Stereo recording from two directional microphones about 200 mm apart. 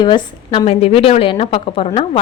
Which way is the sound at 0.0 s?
25° left (ahead or behind).